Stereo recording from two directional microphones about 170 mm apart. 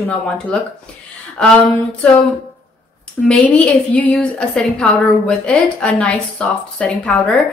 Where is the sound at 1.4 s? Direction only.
5° left (ahead or behind).